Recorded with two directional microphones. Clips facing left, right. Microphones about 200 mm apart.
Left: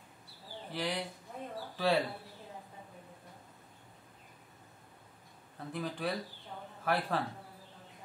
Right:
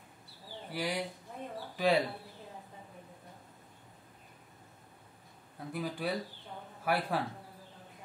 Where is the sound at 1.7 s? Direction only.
15° right (ahead or behind).